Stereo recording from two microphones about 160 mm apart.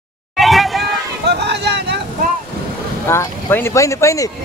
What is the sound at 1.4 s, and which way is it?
Speech, 90° right.